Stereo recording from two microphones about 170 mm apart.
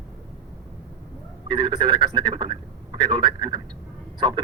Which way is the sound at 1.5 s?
25° right (ahead or behind).